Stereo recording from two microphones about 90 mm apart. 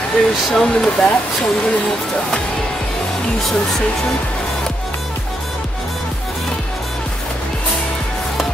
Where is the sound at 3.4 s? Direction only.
5° left (ahead or behind).